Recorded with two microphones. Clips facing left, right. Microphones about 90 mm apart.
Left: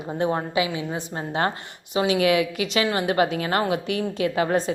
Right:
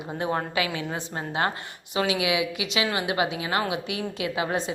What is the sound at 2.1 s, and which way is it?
A woman's voice, 45° left (ahead or behind).